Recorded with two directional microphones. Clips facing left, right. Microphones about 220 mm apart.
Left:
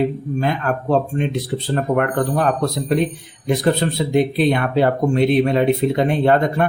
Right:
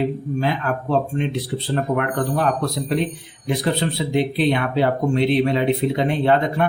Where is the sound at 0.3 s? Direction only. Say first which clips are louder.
Left 3 dB; 50° left (ahead or behind).